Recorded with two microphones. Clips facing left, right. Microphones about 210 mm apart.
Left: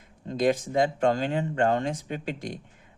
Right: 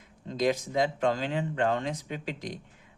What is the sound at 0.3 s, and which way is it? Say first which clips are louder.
Speech: left 3 dB; 50° left (ahead or behind).